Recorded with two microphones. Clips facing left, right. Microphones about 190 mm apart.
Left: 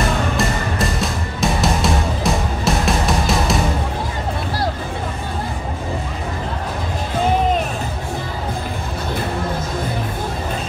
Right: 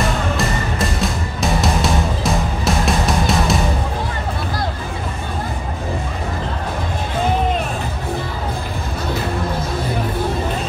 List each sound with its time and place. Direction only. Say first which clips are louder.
0.4 s music: even; centre (ahead or behind)